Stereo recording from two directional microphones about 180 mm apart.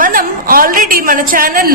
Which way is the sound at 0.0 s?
50° right (ahead or behind).